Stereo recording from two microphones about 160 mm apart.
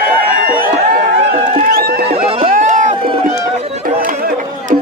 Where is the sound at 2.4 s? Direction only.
50° right (ahead or behind).